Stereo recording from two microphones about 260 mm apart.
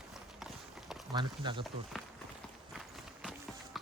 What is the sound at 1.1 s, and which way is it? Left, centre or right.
Speech, centre.